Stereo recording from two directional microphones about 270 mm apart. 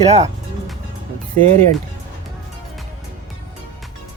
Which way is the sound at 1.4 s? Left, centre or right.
Right.